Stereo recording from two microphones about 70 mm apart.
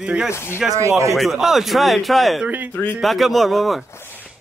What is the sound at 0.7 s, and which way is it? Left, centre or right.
Speech, right.